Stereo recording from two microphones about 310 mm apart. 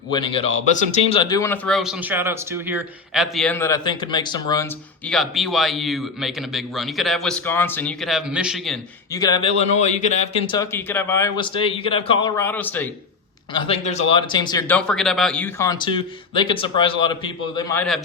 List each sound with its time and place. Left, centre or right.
0.1 s speech: centre
9.1 s speech: centre
13.5 s speech: centre